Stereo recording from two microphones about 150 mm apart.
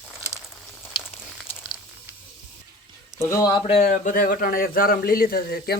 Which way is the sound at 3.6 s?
55° left (ahead or behind).